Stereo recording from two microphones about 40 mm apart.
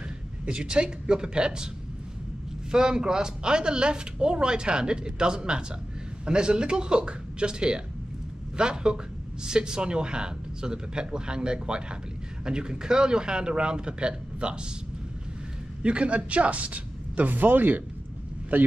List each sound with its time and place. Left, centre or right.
0.5 s speech: right
2.7 s speech: centre
15.8 s speech: right